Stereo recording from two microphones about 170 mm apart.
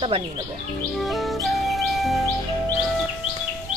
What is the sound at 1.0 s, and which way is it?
Music, centre (ahead or behind).